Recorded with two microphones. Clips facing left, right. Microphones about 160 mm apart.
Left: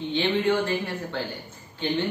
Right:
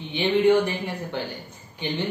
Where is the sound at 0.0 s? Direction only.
15° right (ahead or behind).